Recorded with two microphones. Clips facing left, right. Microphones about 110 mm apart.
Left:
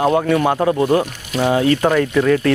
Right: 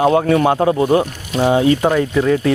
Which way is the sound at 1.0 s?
20° right (ahead or behind).